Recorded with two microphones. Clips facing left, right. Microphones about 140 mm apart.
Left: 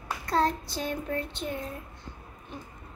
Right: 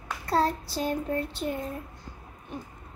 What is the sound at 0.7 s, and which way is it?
Child singing, 35° right (ahead or behind).